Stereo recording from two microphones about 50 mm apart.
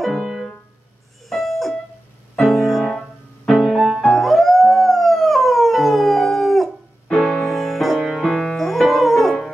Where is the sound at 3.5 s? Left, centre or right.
Centre.